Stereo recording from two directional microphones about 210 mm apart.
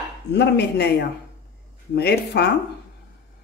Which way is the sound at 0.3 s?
55° left (ahead or behind).